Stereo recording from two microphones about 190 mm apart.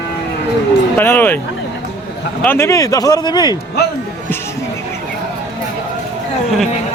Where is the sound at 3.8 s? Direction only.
55° left (ahead or behind).